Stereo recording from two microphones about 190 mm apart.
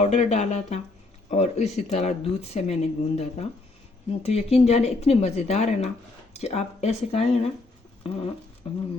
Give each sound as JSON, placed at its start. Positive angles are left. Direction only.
{"t": 0.0, "sound": "speech", "side_deg": 35}
{"t": 8.0, "sound": "patter", "side_deg": 30}
{"t": 8.7, "sound": "speech", "side_deg": 30}